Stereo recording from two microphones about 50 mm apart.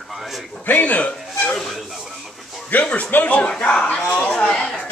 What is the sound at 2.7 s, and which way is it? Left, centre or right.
A man's voice, left.